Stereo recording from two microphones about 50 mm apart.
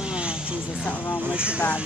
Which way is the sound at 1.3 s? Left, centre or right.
Right.